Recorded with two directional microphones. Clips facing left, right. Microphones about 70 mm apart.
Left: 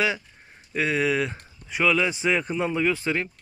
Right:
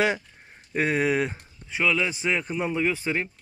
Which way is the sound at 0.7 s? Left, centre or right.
Right.